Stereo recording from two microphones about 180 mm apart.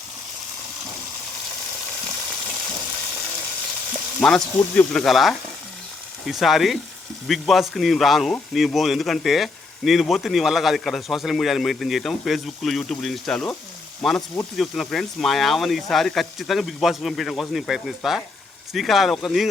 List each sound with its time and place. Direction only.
4.2 s speech: 5° left (ahead or behind)